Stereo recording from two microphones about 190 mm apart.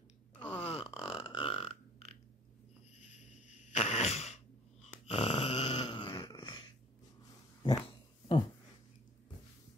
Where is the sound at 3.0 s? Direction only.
40° left (ahead or behind).